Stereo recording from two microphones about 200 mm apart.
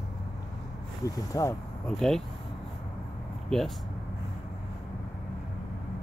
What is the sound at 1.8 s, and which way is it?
Speech, centre (ahead or behind).